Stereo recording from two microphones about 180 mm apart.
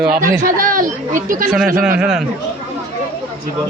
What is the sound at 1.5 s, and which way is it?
Speech, 5° right (ahead or behind).